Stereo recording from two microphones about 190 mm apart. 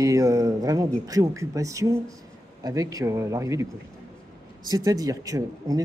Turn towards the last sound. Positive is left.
turn(degrees=-20)  # may be behind; listen again after turning